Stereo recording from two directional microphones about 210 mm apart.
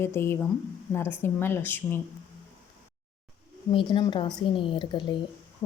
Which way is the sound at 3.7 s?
25° left (ahead or behind).